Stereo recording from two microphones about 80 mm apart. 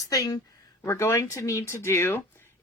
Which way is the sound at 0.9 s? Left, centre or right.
Left.